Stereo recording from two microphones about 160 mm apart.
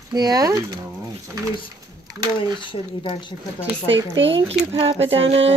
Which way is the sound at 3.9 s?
35° right (ahead or behind).